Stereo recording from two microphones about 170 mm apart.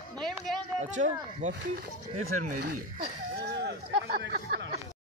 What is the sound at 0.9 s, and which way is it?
Speech, 45° right (ahead or behind).